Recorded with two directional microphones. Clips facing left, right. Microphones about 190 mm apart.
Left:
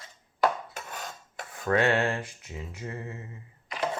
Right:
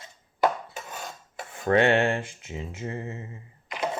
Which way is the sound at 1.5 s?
25° right (ahead or behind).